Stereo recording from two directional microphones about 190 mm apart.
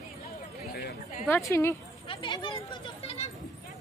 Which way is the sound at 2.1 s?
25° left (ahead or behind).